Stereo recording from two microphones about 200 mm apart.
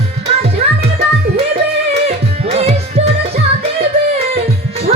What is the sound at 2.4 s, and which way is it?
Music, 30° right (ahead or behind).